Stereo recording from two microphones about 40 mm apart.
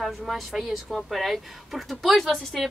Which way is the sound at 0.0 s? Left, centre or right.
Centre.